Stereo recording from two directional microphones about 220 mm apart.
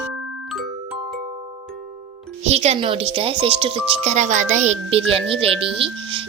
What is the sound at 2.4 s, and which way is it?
Speech, 30° right (ahead or behind).